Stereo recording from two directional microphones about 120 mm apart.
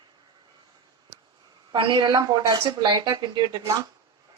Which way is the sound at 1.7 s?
45° right (ahead or behind).